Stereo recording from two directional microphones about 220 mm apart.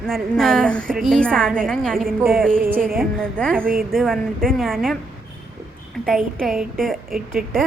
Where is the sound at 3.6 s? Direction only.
40° right (ahead or behind).